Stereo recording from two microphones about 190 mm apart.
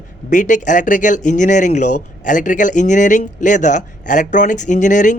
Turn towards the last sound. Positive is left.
turn(degrees=40)  # may be behind; listen again after turning